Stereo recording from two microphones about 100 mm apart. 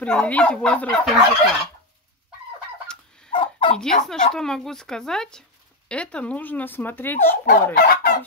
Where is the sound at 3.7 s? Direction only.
5° left (ahead or behind).